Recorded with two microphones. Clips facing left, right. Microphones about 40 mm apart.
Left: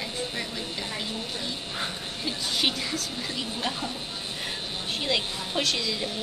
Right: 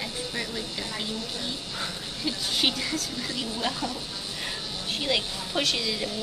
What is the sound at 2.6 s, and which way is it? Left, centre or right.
Speech, centre.